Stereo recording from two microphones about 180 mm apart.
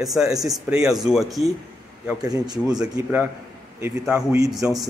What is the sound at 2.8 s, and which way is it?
Speech, 10° right (ahead or behind).